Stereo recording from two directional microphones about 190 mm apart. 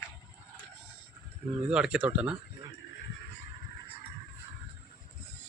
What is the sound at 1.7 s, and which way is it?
Speech, 5° right (ahead or behind).